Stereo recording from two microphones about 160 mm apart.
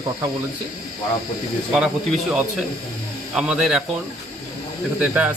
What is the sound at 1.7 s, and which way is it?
Speech, 5° right (ahead or behind).